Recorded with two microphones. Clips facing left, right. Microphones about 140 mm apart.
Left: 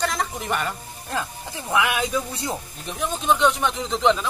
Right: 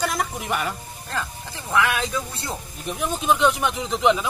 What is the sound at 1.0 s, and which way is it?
Speech, 15° left (ahead or behind).